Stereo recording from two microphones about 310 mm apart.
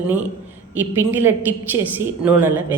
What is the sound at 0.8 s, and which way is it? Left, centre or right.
A woman's voice, centre.